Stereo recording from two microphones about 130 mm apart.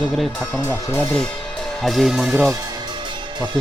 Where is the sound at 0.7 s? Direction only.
15° left (ahead or behind).